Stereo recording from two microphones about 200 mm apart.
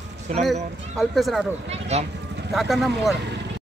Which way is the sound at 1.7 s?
30° right (ahead or behind).